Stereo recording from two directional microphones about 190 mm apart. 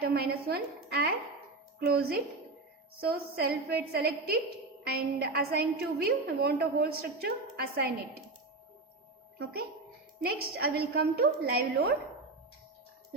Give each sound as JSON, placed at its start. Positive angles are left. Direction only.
{"t": 0.0, "sound": "a woman's voice", "side_deg": -55}
{"t": 10.2, "sound": "a woman's voice", "side_deg": -55}